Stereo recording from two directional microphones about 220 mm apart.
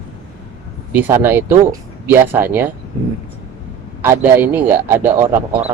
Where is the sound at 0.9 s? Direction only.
10° right (ahead or behind).